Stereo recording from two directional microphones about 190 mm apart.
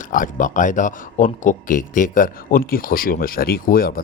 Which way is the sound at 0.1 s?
45° left (ahead or behind).